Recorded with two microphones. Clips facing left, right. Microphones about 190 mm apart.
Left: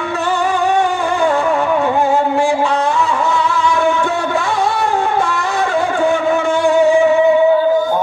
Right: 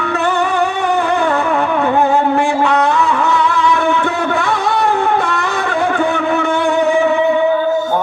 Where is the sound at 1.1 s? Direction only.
60° right (ahead or behind).